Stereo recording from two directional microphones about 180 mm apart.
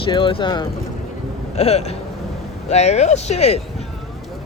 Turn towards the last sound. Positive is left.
turn(degrees=35)  # may be behind; listen again after turning